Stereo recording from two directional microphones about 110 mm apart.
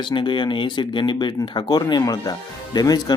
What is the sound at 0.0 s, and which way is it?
Speech, 45° left (ahead or behind).